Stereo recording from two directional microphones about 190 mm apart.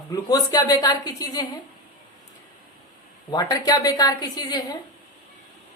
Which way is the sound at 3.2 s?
20° left (ahead or behind).